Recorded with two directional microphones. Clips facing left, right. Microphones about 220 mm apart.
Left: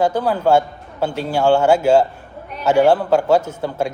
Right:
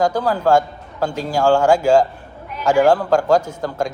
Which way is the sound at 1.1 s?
40° right (ahead or behind).